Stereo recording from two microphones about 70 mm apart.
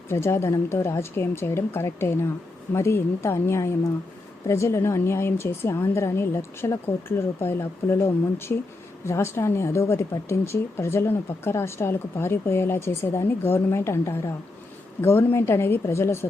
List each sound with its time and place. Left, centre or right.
0.1 s speech: left